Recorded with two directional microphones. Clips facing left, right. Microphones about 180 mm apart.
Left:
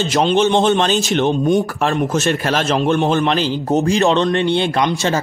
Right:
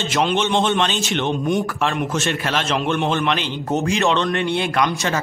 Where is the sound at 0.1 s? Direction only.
40° left (ahead or behind).